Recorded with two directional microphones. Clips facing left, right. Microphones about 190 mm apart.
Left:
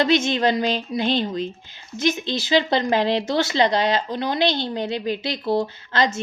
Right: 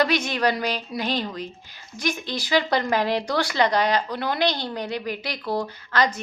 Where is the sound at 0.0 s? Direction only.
25° left (ahead or behind).